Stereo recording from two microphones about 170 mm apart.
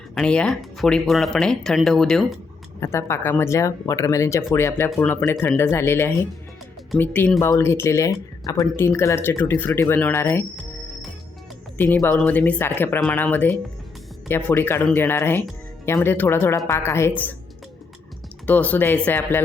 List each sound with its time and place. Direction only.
0.1 s speech: 5° left (ahead or behind)
2.8 s speech: 15° left (ahead or behind)
11.8 s speech: 10° left (ahead or behind)
18.4 s speech: 10° left (ahead or behind)